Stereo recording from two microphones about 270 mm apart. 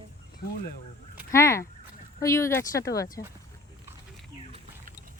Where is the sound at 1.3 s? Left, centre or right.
Centre.